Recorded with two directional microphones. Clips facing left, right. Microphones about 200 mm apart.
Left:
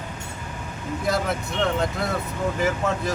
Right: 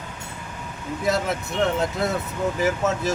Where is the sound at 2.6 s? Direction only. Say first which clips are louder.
Right 2 dB; 5° right (ahead or behind).